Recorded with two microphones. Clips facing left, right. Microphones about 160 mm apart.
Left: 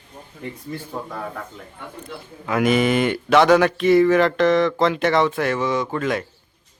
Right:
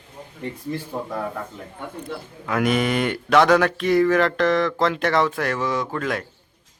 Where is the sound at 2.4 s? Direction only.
Centre (ahead or behind).